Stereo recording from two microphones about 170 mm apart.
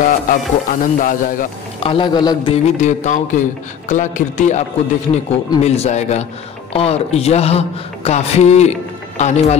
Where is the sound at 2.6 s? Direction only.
45° left (ahead or behind).